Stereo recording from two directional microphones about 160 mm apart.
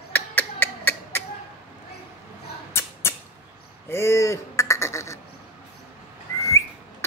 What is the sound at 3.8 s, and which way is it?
Quack, 15° left (ahead or behind).